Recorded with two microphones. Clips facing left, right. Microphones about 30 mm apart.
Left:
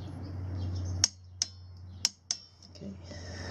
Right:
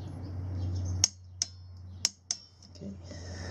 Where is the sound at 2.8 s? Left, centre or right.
Centre.